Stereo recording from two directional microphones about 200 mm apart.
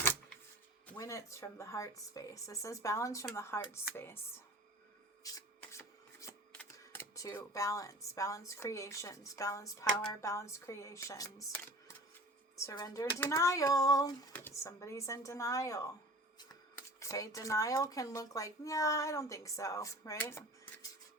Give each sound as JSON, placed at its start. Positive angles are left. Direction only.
{"t": 0.9, "sound": "speech", "side_deg": 15}
{"t": 5.2, "sound": "a sound", "side_deg": 15}
{"t": 10.2, "sound": "speech", "side_deg": 15}
{"t": 17.0, "sound": "speech", "side_deg": 15}